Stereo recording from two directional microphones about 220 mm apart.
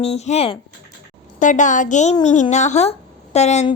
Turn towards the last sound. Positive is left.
turn(degrees=30)  # may be behind; listen again after turning